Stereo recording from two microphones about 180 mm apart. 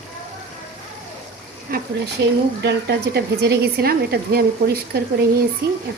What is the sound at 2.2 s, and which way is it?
A woman's voice, 70° right (ahead or behind).